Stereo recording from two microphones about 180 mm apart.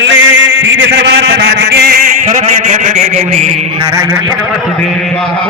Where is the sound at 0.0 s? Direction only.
90° right; by 2.0 s 60° right (ahead or behind).